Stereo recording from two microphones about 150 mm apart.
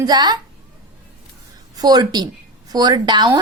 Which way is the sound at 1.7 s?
25° right (ahead or behind).